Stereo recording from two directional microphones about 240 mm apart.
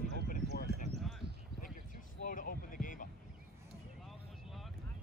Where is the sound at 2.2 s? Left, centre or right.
Left.